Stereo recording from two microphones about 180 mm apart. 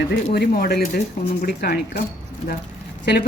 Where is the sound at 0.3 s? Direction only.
60° left (ahead or behind).